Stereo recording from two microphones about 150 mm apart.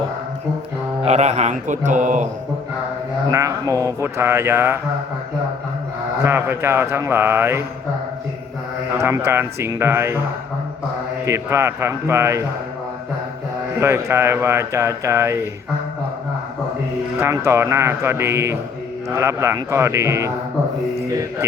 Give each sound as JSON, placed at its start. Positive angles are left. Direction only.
{"t": 1.0, "sound": "speech", "side_deg": -50}
{"t": 3.2, "sound": "speech", "side_deg": -20}
{"t": 6.2, "sound": "speech", "side_deg": -15}
{"t": 9.0, "sound": "speech", "side_deg": -15}
{"t": 11.3, "sound": "speech", "side_deg": -20}
{"t": 13.7, "sound": "speech", "side_deg": -15}
{"t": 17.2, "sound": "a man's voice", "side_deg": -15}